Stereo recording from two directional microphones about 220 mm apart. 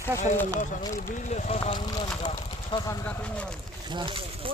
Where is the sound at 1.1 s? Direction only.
35° left (ahead or behind); by 3.6 s 5° left (ahead or behind).